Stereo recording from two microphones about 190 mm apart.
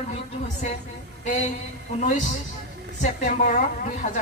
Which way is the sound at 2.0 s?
40° left (ahead or behind).